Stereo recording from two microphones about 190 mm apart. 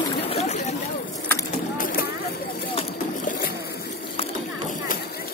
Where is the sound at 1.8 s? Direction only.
50° left (ahead or behind).